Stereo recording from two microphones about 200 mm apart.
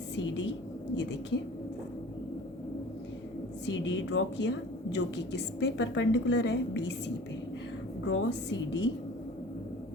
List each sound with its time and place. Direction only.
0.2 s a sound: 65° left (ahead or behind)
0.9 s a woman's voice: 60° left (ahead or behind)
3.7 s a woman's voice: 65° left (ahead or behind)
8.0 s a woman's voice: 70° left (ahead or behind)